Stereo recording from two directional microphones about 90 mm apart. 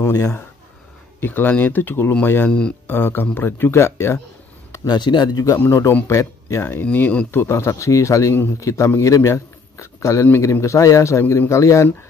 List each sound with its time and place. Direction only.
0.0 s speech: 35° left (ahead or behind)
1.2 s speech: 20° left (ahead or behind)
4.8 s speech: 55° left (ahead or behind)
5.6 s speech: 30° left (ahead or behind)
6.9 s speech: 15° left (ahead or behind)
7.2 s a man's voice: 30° left (ahead or behind)